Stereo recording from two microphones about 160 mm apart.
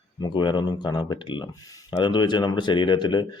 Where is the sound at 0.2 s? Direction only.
30° left (ahead or behind).